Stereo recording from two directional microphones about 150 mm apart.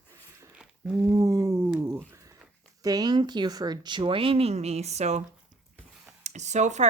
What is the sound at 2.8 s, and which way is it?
Speech, 25° right (ahead or behind).